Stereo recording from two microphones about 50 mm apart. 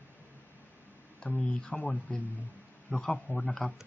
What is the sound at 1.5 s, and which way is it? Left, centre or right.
Speech, centre.